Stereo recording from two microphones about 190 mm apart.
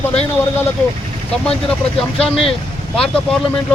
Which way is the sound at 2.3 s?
30° left (ahead or behind).